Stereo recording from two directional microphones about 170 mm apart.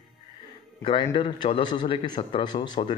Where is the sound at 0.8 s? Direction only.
30° left (ahead or behind).